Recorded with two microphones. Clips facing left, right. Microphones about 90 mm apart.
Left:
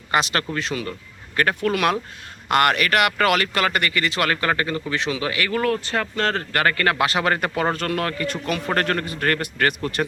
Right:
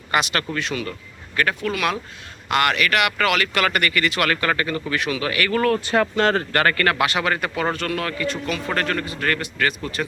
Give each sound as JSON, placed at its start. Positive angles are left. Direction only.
{"t": 0.1, "sound": "a man's voice", "side_deg": 30}
{"t": 5.5, "sound": "speech", "side_deg": 5}
{"t": 5.8, "sound": "speech", "side_deg": -15}
{"t": 6.5, "sound": "speech", "side_deg": 5}
{"t": 7.0, "sound": "a man's voice", "side_deg": 35}